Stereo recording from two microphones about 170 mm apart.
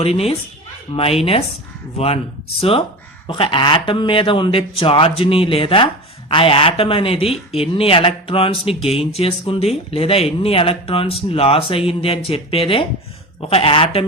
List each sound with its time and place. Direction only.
0.0 s speech: 35° left (ahead or behind)
2.6 s speech: 35° left (ahead or behind)